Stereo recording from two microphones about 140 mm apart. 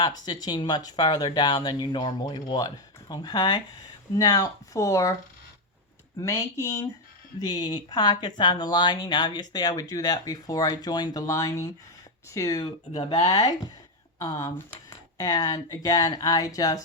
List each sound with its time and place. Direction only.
0.3 s speech: 30° left (ahead or behind)
6.2 s speech: 20° left (ahead or behind)
7.4 s speech: 35° left (ahead or behind)
12.9 s speech: 45° left (ahead or behind)
13.1 s speech: 30° left (ahead or behind)